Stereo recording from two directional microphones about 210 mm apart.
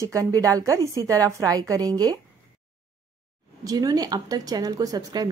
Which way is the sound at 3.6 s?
15° right (ahead or behind).